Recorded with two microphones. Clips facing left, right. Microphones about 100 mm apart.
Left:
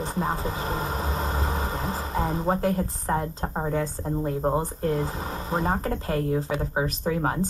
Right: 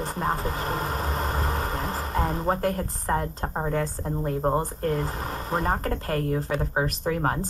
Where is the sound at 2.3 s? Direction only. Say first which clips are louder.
Left 3 dB; 15° left (ahead or behind).